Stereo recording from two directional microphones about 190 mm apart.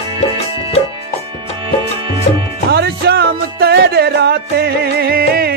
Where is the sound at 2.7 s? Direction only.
55° right (ahead or behind).